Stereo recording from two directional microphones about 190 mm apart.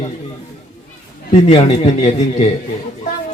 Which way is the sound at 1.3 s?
35° left (ahead or behind).